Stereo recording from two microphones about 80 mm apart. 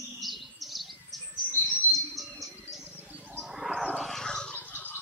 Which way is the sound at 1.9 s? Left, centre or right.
Centre.